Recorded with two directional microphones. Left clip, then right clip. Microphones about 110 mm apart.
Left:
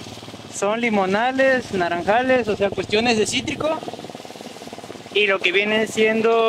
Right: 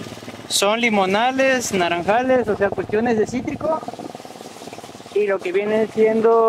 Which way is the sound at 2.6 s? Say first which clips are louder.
Even; 35° left (ahead or behind).